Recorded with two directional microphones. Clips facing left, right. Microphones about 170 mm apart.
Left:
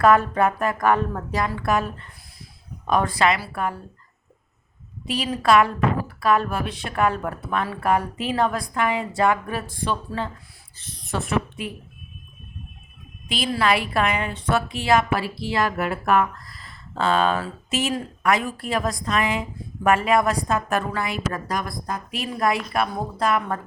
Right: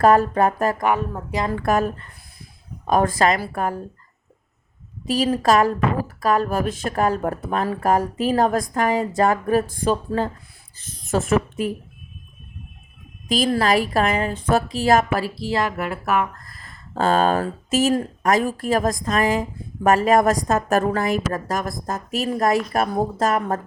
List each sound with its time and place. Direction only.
0.0 s speech: 35° right (ahead or behind)
0.9 s speech: 10° right (ahead or behind)
1.5 s speech: 45° right (ahead or behind)
5.0 s speech: 40° right (ahead or behind)
13.2 s speech: 40° right (ahead or behind)
15.7 s speech: centre (ahead or behind)
16.3 s speech: 50° right (ahead or behind)